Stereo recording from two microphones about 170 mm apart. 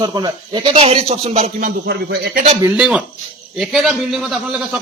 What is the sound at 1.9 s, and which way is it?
Speech, 80° right.